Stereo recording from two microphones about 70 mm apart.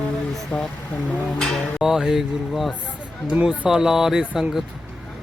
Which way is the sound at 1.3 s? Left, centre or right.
Centre.